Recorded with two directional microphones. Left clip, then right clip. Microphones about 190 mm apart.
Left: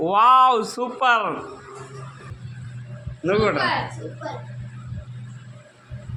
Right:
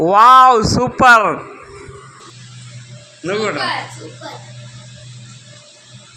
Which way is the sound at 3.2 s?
Centre (ahead or behind).